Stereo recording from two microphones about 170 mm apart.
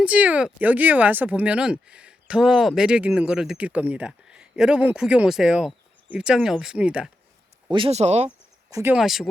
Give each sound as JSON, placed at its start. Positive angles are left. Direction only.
{"t": 0.0, "sound": "speech", "side_deg": -10}
{"t": 7.7, "sound": "speech", "side_deg": -35}
{"t": 8.7, "sound": "speech", "side_deg": -15}
{"t": 9.0, "sound": "speech", "side_deg": 0}